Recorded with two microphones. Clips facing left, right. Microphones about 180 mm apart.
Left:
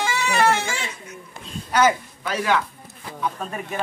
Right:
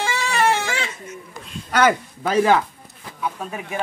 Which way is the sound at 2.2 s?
40° right (ahead or behind).